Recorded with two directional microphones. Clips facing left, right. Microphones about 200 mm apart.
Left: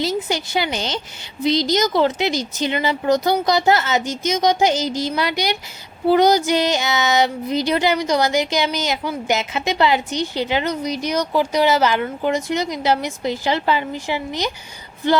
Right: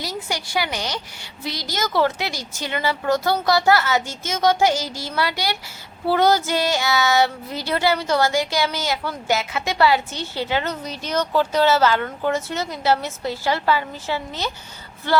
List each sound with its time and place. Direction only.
0.0 s speech: 25° left (ahead or behind)
6.1 s child singing: 15° left (ahead or behind)